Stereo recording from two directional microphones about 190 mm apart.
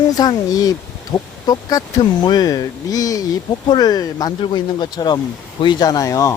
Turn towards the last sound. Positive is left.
turn(degrees=15)  # may be behind; listen again after turning